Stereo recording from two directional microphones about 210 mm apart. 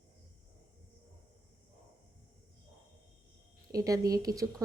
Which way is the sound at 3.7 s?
15° right (ahead or behind).